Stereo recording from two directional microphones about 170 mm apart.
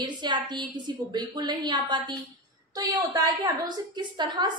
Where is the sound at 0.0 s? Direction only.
25° right (ahead or behind).